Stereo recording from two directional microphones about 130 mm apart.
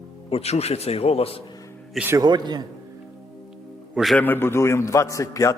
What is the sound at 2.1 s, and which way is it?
Speech, 35° right (ahead or behind).